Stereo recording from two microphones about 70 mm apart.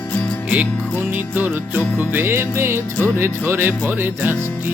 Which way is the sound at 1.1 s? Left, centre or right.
Right.